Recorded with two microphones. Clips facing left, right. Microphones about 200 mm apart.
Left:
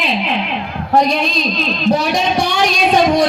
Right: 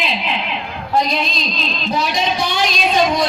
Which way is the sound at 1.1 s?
45° left (ahead or behind).